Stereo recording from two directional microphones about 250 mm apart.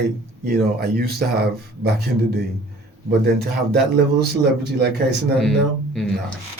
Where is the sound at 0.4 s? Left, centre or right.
Right.